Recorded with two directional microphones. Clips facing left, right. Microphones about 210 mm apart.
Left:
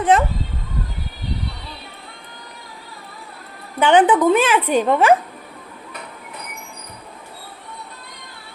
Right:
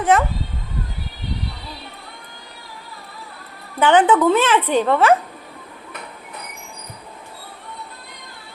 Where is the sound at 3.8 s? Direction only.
15° left (ahead or behind).